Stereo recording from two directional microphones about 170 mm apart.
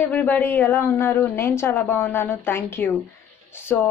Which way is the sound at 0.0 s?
10° left (ahead or behind).